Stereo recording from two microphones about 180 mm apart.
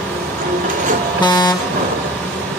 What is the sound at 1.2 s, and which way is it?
Vehicle, 20° left (ahead or behind).